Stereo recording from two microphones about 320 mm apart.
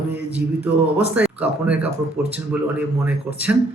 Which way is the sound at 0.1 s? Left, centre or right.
Centre.